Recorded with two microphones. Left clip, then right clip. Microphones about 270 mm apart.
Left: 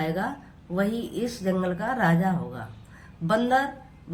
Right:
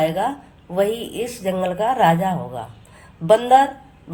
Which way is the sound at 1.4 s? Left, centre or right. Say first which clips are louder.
Right 9 dB; right.